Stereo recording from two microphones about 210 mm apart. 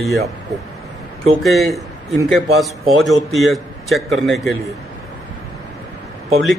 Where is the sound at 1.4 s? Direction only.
Centre (ahead or behind).